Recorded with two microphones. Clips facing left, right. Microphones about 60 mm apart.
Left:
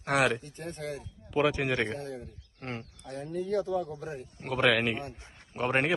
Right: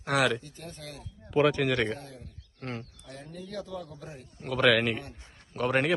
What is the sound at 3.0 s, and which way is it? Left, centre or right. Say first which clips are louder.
Speech: left 8 dB; left.